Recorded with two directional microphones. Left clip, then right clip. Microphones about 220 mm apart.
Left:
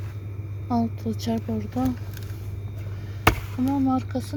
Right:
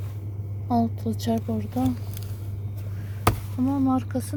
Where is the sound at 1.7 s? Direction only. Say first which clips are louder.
Even; 5° right (ahead or behind).